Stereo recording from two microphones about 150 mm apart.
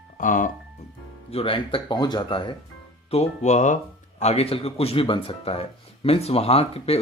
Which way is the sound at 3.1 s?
45° left (ahead or behind).